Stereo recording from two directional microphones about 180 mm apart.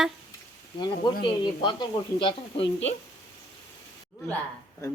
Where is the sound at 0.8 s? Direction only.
25° left (ahead or behind).